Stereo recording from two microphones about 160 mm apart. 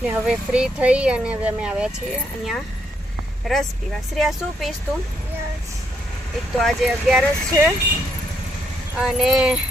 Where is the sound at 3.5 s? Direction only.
Centre (ahead or behind).